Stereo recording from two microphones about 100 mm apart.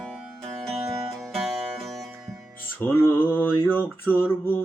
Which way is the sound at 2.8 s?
20° left (ahead or behind).